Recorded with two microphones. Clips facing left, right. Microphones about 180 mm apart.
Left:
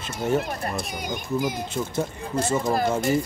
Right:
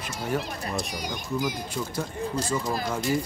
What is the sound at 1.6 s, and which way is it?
Speech, 25° left (ahead or behind).